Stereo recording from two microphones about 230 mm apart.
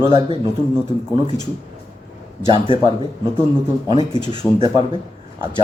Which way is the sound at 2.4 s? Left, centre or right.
Right.